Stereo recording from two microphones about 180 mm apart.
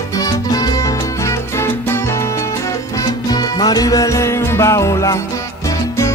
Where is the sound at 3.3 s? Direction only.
20° left (ahead or behind).